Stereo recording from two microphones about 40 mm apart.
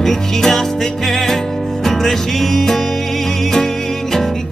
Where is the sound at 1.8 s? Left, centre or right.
Centre.